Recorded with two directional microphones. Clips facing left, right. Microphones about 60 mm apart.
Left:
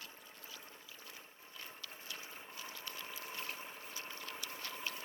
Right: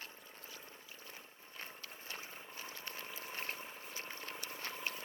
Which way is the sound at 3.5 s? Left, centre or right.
Centre.